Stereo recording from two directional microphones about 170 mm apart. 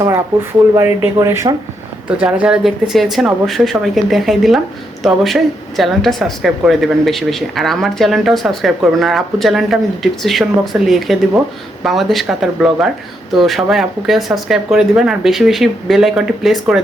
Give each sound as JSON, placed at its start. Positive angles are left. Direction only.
{"t": 0.7, "sound": "speech", "side_deg": -15}
{"t": 2.0, "sound": "speech", "side_deg": -5}